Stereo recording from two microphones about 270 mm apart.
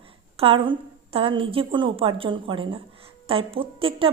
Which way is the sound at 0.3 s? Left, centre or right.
Centre.